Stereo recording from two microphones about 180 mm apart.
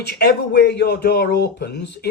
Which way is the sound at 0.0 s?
65° left (ahead or behind).